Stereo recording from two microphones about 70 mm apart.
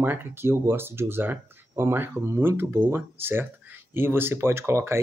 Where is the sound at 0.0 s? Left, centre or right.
Right.